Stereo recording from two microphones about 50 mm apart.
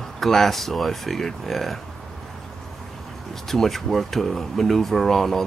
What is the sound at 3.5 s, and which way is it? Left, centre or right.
Speech, centre.